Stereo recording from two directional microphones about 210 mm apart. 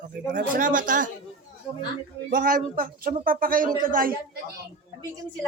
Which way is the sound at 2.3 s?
40° right (ahead or behind).